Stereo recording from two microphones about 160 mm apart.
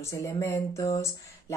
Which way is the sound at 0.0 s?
20° left (ahead or behind).